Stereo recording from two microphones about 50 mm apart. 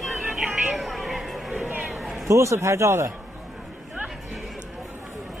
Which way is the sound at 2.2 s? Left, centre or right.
Right.